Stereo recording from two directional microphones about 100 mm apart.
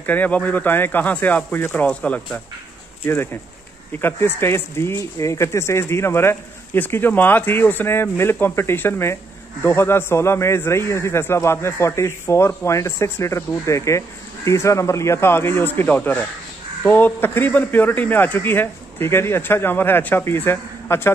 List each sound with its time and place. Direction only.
0.0 s speech: 15° left (ahead or behind)
3.1 s a man's voice: 25° left (ahead or behind)